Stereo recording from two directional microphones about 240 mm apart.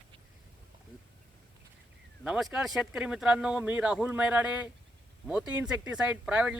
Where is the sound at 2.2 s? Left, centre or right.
Centre.